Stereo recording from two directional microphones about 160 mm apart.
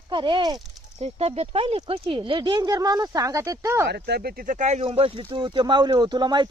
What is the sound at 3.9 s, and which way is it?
Speech, 90° right.